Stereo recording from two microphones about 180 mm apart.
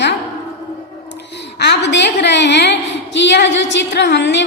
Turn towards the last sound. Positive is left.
turn(degrees=75)  # may be behind; listen again after turning